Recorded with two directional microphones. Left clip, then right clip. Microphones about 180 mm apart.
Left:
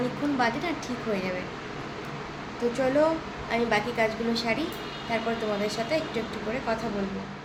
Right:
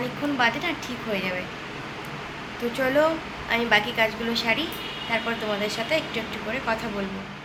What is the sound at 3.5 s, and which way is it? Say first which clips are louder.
Speech: right 4 dB; 10° left (ahead or behind).